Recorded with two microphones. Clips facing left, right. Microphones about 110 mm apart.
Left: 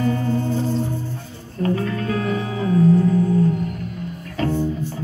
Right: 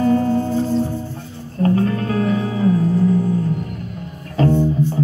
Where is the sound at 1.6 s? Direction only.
35° right (ahead or behind).